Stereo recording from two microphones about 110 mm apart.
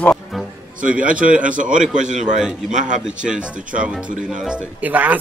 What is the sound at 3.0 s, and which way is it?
Speech, 10° right (ahead or behind).